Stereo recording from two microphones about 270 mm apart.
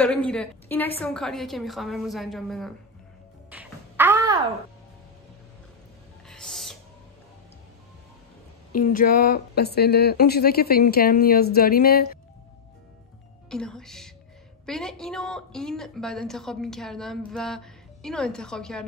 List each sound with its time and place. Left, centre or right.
0.0 s a woman's voice: centre
3.4 s a sound: centre
6.2 s music: centre
8.7 s speech: left
13.5 s a woman's voice: centre